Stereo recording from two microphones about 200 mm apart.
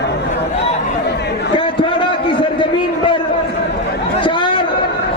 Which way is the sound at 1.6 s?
25° left (ahead or behind).